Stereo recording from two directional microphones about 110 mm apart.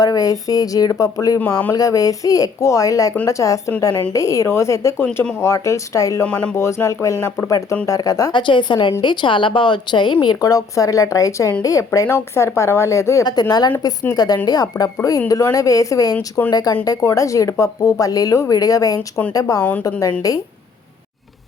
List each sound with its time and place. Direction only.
0.0 s a woman's voice: 35° left (ahead or behind)
1.4 s speech: 15° left (ahead or behind)
1.7 s a woman's voice: 35° left (ahead or behind)
6.2 s speech: 10° left (ahead or behind)
6.6 s a woman's voice: 25° left (ahead or behind)
8.3 s a woman's voice: 45° left (ahead or behind); by 13.2 s 25° left (ahead or behind)
13.2 s a woman's voice: 40° left (ahead or behind)